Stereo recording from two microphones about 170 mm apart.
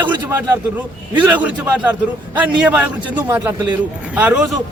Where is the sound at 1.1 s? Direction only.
10° right (ahead or behind).